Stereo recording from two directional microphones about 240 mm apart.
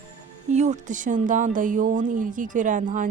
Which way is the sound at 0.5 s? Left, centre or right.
Right.